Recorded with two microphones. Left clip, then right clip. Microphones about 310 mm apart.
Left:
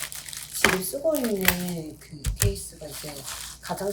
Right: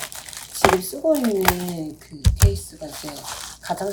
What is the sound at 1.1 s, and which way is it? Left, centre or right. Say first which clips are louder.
Speech: right 8 dB; right.